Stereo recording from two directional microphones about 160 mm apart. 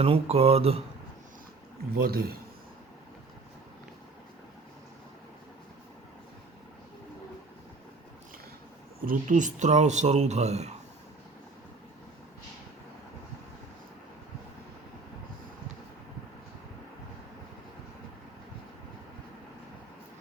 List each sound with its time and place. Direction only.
0.0 s speech: 35° right (ahead or behind)
1.9 s a man's voice: 70° right (ahead or behind)
9.0 s speech: 55° right (ahead or behind)